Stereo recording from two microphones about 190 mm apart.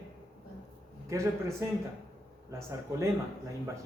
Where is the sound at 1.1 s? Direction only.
15° right (ahead or behind).